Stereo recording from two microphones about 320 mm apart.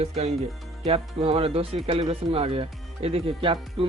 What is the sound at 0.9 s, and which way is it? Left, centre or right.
Speech, centre.